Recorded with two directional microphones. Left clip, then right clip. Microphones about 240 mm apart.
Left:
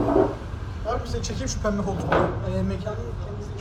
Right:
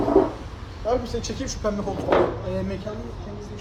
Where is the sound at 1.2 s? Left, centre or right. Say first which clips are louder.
Right 1 dB; right.